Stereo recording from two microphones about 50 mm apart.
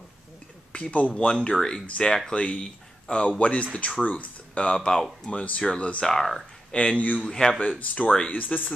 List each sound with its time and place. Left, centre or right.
0.7 s speech: left; by 6.4 s centre
6.7 s speech: left